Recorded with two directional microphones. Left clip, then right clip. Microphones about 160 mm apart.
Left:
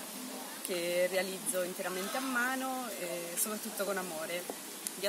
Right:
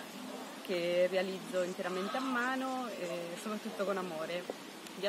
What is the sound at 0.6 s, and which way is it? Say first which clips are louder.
Speech: right 1 dB; 5° left (ahead or behind).